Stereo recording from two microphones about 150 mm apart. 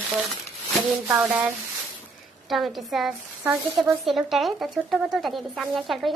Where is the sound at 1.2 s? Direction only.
10° right (ahead or behind).